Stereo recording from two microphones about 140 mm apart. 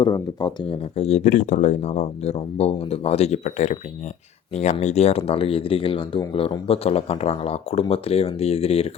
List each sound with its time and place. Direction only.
0.0 s speech: 30° left (ahead or behind)